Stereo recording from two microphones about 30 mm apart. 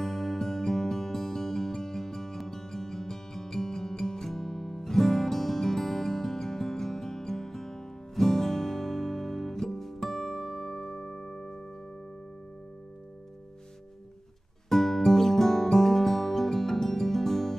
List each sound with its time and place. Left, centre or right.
0.0 s music: centre
14.7 s music: centre